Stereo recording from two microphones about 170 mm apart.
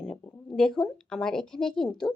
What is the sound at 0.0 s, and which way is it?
A woman's voice, 5° left (ahead or behind).